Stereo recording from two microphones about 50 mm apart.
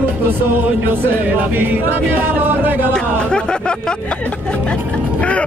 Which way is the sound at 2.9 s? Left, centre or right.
Centre.